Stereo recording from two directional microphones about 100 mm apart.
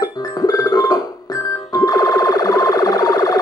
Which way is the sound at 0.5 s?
40° left (ahead or behind).